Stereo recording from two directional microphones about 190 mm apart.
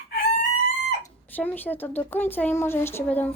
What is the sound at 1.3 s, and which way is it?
Speech, 10° left (ahead or behind).